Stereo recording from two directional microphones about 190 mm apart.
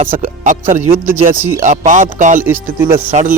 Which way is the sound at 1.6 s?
40° right (ahead or behind).